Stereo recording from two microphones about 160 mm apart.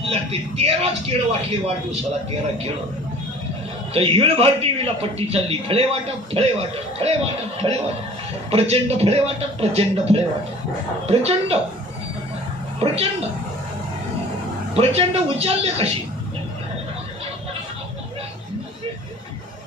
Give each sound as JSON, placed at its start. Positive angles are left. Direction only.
{"t": 0.0, "sound": "a man's voice", "side_deg": -40}
{"t": 3.9, "sound": "a man's voice", "side_deg": -35}
{"t": 12.8, "sound": "a man's voice", "side_deg": -40}
{"t": 14.7, "sound": "a man's voice", "side_deg": -40}